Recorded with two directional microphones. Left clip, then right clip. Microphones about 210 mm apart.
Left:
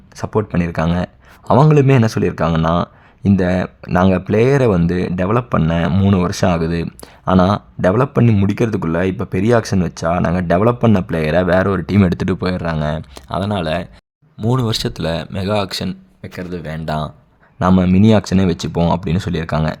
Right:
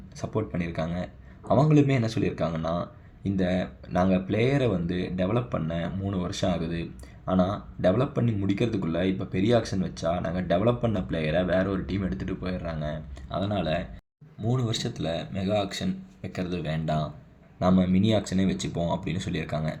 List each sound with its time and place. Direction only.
0.2 s speech: 40° left (ahead or behind)
16.2 s speech: 30° left (ahead or behind)
18.1 s speech: 40° left (ahead or behind)